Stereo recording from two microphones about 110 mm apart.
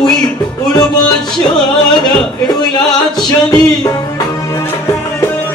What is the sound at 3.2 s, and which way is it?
Music, 35° left (ahead or behind).